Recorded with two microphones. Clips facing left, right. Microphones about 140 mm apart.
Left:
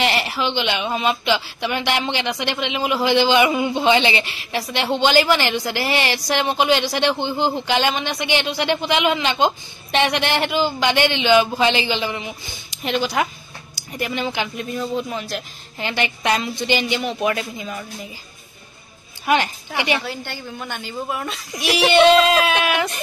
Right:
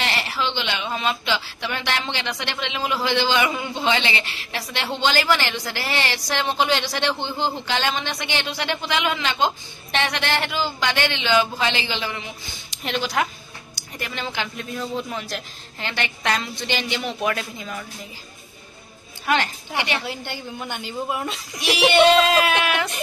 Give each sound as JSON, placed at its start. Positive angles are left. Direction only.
{"t": 0.0, "sound": "speech", "side_deg": 15}
{"t": 12.8, "sound": "speech", "side_deg": 5}
{"t": 19.2, "sound": "a woman's voice", "side_deg": 10}
{"t": 20.1, "sound": "a woman's voice", "side_deg": -20}
{"t": 21.6, "sound": "speech", "side_deg": 0}